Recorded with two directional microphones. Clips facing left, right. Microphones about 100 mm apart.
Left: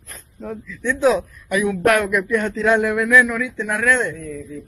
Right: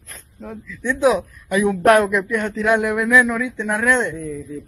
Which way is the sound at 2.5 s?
15° right (ahead or behind).